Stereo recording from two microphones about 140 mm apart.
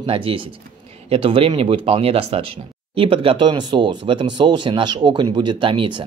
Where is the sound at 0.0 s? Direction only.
40° right (ahead or behind).